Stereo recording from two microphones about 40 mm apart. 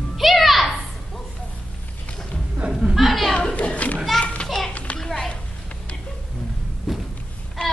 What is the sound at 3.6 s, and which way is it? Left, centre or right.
Children playing, left.